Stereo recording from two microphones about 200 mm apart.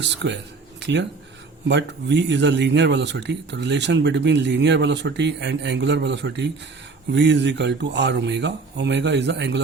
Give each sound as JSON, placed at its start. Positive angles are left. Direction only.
{"t": 0.0, "sound": "speech", "side_deg": -65}